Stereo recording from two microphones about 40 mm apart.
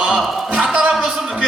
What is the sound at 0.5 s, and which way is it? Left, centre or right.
Speech, right.